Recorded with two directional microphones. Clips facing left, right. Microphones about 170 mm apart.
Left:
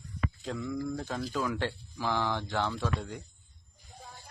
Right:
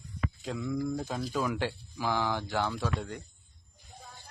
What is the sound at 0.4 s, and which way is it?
Speech, 5° right (ahead or behind).